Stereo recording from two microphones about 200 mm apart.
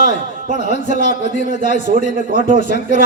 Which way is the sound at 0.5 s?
35° left (ahead or behind).